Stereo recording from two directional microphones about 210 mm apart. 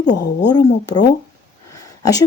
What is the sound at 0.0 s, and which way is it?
Speech, 55° left (ahead or behind).